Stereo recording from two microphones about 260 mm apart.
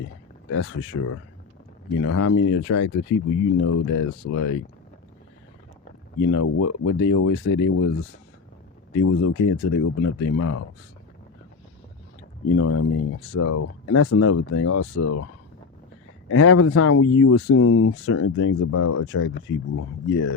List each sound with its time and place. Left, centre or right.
0.5 s speech: left
6.1 s speech: left
8.9 s speech: left
12.5 s speech: left
16.3 s speech: left